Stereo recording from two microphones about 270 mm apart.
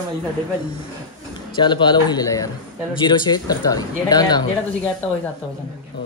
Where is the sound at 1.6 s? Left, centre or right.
Centre.